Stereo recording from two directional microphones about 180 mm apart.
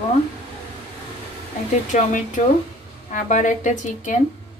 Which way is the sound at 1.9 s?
45° left (ahead or behind).